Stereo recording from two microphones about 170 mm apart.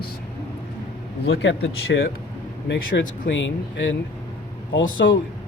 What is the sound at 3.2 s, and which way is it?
Speech, 90° left.